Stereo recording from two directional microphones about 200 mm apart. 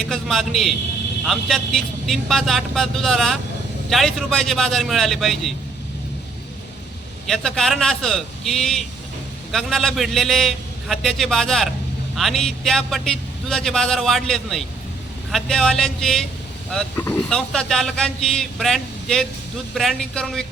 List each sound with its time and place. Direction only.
0.1 s speech: centre (ahead or behind)
7.3 s speech: centre (ahead or behind)